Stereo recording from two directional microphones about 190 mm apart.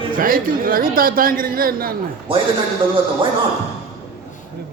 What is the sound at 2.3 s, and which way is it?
Speech, 25° right (ahead or behind).